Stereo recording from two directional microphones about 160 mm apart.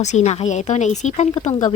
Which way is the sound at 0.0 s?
45° left (ahead or behind).